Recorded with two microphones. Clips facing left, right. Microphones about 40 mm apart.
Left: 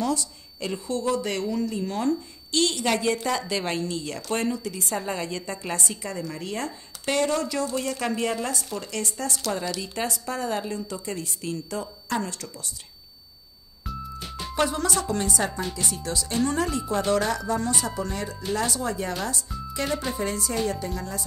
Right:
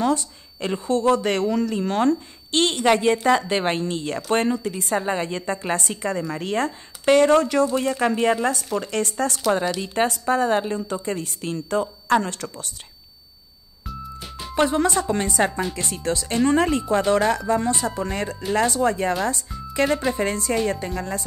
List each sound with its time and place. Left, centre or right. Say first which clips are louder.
0.0 s a woman's voice: right 5 dB; right
7.7 s a woman's voice: right 6 dB; right
8.9 s a woman's voice: right 5 dB; right
13.8 s music: even; centre
14.5 s a woman's voice: right 5 dB; right